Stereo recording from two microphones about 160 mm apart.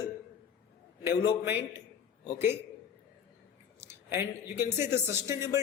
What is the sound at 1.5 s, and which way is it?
Speech, 15° right (ahead or behind).